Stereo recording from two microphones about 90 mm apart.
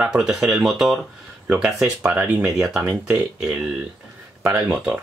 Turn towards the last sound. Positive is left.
turn(degrees=-10)  # may be behind; listen again after turning